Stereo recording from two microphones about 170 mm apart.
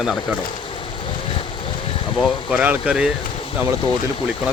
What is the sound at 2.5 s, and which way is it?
Speech, 5° right (ahead or behind).